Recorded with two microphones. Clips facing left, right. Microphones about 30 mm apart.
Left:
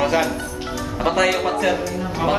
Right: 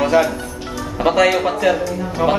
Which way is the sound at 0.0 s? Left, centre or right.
Centre.